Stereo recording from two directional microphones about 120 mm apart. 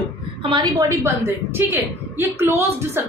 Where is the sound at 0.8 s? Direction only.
25° right (ahead or behind).